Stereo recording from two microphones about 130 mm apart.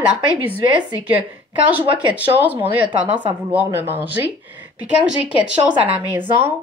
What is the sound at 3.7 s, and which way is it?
Speech, 15° right (ahead or behind).